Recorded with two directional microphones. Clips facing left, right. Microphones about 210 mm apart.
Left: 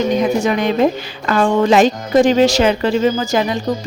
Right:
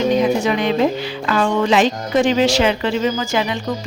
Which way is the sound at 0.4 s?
45° left (ahead or behind).